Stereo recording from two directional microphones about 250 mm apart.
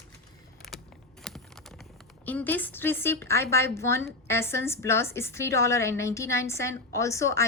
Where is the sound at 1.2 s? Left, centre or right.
Centre.